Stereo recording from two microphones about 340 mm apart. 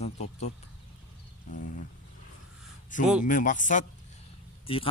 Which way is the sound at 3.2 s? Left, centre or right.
Left.